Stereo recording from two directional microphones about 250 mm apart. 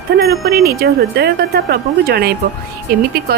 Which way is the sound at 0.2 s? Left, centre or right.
Right.